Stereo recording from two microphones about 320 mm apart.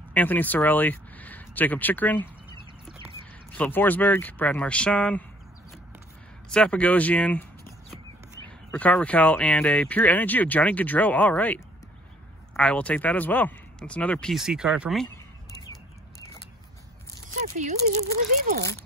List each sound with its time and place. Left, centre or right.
0.1 s speech: centre
3.5 s speech: centre
6.5 s speech: centre
8.5 s speech: centre
17.4 s speech: right